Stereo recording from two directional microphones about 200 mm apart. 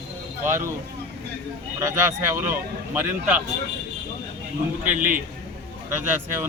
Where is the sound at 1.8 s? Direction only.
15° right (ahead or behind).